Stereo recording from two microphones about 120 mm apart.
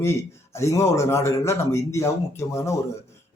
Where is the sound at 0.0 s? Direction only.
20° left (ahead or behind).